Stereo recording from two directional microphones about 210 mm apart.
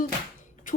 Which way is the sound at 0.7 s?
40° left (ahead or behind).